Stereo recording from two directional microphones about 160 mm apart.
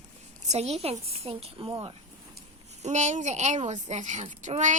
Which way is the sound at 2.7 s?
45° right (ahead or behind).